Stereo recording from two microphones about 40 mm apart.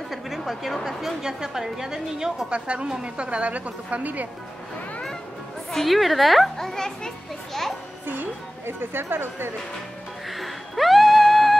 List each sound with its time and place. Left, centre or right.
0.5 s a woman's voice: centre
2.5 s a woman's voice: right
5.7 s a woman's voice: centre
6.5 s a child's voice: centre
8.6 s speech: right
10.3 s a sound: centre